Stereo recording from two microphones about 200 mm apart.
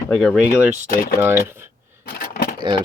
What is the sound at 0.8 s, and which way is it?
Speech, 45° left (ahead or behind).